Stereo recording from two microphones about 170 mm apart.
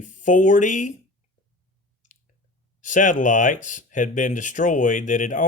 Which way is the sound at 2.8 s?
50° left (ahead or behind).